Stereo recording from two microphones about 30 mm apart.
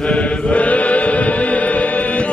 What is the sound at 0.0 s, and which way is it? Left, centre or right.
Chant, left.